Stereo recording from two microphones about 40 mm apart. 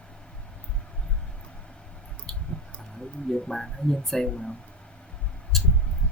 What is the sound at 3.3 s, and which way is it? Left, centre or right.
Speech, centre.